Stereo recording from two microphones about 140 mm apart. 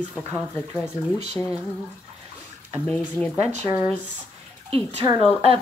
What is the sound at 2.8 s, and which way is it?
Speech, 10° left (ahead or behind).